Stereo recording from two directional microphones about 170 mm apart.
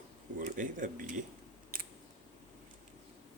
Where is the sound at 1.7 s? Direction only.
55° right (ahead or behind).